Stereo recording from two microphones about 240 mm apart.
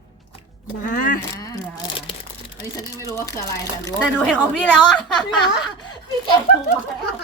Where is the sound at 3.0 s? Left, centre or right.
Centre.